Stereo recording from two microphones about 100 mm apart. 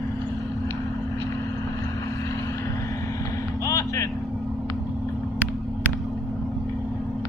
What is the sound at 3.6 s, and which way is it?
Vehicle, 35° left (ahead or behind).